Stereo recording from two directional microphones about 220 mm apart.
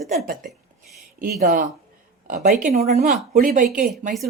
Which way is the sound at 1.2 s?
40° right (ahead or behind).